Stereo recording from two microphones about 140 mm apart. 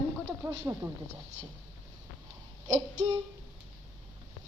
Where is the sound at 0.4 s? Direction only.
15° right (ahead or behind).